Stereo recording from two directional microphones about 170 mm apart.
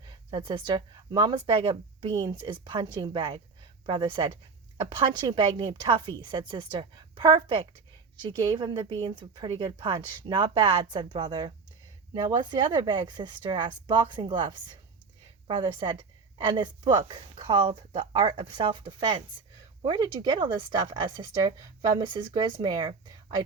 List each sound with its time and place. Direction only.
0.3 s a woman's voice: 30° right (ahead or behind)
8.5 s a woman's voice: 25° right (ahead or behind)